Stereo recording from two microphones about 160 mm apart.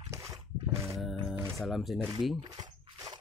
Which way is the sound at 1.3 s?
15° right (ahead or behind).